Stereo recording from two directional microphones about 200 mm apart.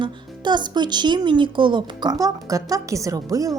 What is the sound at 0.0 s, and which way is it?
A woman's voice, 20° right (ahead or behind).